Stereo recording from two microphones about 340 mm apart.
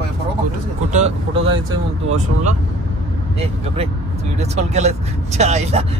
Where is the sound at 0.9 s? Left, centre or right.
Centre.